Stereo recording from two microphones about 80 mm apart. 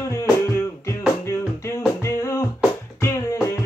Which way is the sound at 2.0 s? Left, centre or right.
Left.